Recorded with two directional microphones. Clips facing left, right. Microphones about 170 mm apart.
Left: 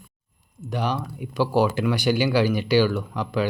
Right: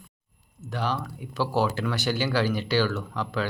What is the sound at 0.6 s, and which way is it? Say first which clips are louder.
Speech: left 3 dB; 15° left (ahead or behind).